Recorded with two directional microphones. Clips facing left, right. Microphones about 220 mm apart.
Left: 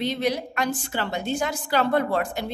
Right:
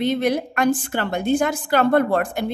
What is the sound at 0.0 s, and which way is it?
A woman's voice, 55° right (ahead or behind).